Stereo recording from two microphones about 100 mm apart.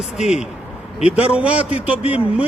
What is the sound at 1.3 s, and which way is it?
Speech, 10° right (ahead or behind).